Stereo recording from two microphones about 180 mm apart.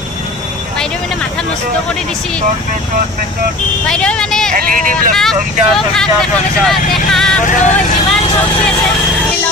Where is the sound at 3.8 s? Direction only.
5° left (ahead or behind).